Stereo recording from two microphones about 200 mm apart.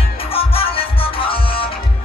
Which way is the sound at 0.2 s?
30° left (ahead or behind).